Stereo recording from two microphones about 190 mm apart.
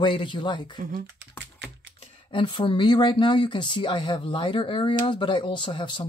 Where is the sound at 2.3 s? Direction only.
25° left (ahead or behind).